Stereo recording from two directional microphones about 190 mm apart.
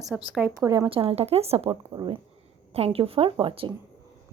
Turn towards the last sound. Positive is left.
turn(degrees=-25)  # may be behind; listen again after turning